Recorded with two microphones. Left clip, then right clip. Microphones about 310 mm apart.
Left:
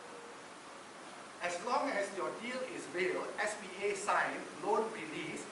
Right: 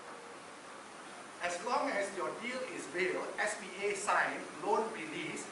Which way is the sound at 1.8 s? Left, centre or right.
Centre.